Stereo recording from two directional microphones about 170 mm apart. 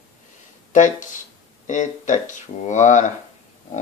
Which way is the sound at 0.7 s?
50° left (ahead or behind).